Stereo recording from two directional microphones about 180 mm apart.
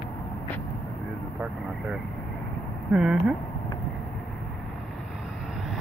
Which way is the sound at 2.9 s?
5° right (ahead or behind).